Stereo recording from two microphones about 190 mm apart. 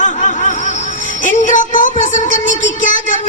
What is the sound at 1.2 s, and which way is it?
Speech, 40° left (ahead or behind).